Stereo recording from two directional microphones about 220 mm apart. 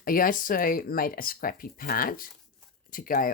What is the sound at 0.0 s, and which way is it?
Speech, 40° left (ahead or behind).